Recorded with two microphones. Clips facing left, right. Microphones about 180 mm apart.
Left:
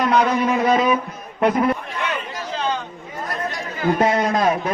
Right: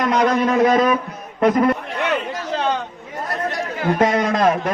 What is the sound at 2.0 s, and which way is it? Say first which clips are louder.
Chatter: right 4 dB; 60° right (ahead or behind).